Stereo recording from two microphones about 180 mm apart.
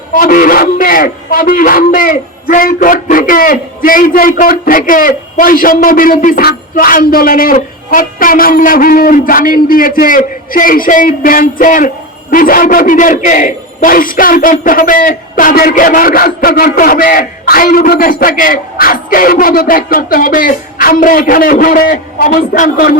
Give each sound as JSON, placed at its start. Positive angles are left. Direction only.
{"t": 0.1, "sound": "a man's voice", "side_deg": 50}